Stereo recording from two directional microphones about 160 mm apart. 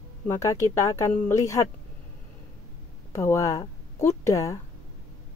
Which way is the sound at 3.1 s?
20° left (ahead or behind).